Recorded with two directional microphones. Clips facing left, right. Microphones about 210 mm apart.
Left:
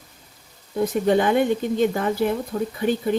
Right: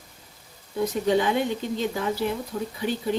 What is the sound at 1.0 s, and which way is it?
Speech, 55° left (ahead or behind).